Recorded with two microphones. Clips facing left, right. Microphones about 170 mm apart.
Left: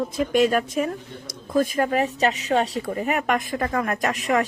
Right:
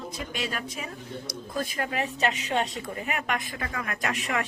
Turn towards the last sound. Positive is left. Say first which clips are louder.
# left 7 dB
turn(degrees=40)  # may be behind; listen again after turning